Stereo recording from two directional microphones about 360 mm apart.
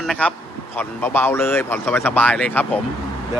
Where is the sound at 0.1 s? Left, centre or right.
Centre.